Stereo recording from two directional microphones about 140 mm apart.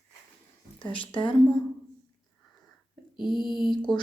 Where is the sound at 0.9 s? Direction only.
35° left (ahead or behind).